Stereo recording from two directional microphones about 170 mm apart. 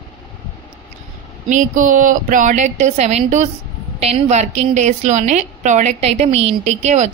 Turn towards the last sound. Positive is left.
turn(degrees=-40)  # may be behind; listen again after turning